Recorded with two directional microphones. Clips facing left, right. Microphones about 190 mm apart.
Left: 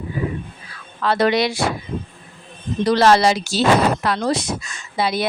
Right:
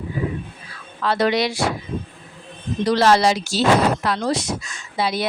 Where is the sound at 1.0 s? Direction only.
60° left (ahead or behind).